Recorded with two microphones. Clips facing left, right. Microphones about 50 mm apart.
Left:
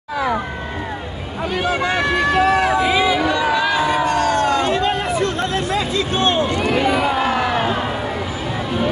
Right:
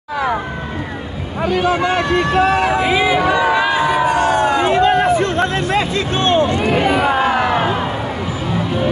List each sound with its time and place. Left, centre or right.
2.8 s crowd: right
4.7 s hubbub: right
6.8 s crowd: right; by 7.6 s centre